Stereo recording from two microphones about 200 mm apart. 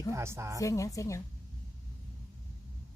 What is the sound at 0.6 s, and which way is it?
Speech, 15° left (ahead or behind).